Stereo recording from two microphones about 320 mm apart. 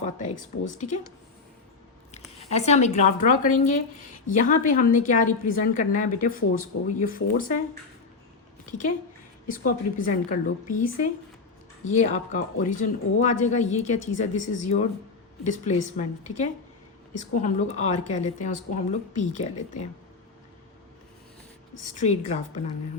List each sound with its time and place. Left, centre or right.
0.0 s a woman's voice: left
2.4 s a woman's voice: centre
9.5 s a woman's voice: left
11.9 s a woman's voice: left
21.8 s a woman's voice: left